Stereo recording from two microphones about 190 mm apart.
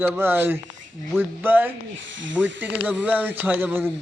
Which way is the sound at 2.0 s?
80° right.